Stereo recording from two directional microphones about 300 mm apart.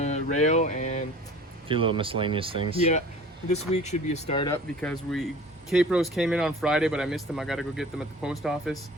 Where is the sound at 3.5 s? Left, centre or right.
Left.